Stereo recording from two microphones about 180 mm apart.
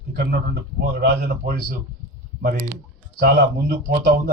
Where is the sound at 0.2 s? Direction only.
65° right (ahead or behind).